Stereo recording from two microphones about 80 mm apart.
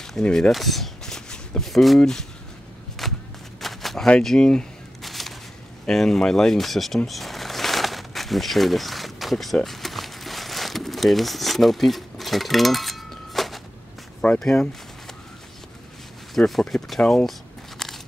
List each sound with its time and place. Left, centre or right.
0.0 s speech: centre
3.0 s a sound: centre
5.9 s speech: centre
7.1 s a sound: centre
14.4 s speech: centre
16.3 s speech: centre
17.1 s crumpling: centre